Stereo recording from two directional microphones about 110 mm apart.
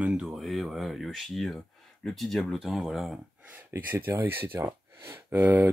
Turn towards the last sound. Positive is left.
turn(degrees=-15)  # may be behind; listen again after turning